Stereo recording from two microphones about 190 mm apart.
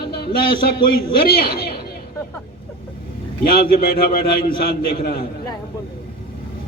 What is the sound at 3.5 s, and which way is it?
A man's voice, 50° left (ahead or behind).